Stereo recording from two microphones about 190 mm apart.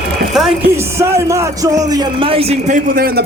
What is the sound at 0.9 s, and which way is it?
A man's voice, 15° right (ahead or behind).